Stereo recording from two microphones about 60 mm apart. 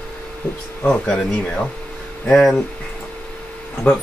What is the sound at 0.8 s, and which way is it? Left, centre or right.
Speech, centre.